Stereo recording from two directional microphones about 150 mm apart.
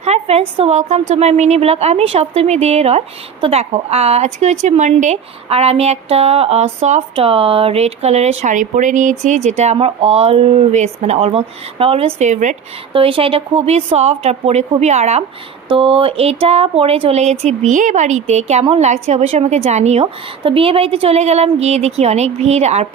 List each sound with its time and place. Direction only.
0.0 s a woman's voice: 45° right (ahead or behind)
12.9 s a woman's voice: 35° right (ahead or behind)
15.7 s a woman's voice: 35° right (ahead or behind)